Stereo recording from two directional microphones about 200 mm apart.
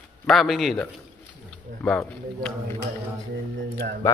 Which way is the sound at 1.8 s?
5° left (ahead or behind).